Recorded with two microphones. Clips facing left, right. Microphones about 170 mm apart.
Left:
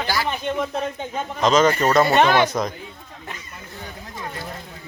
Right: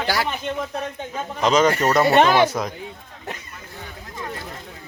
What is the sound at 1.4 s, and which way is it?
Speech, 10° right (ahead or behind).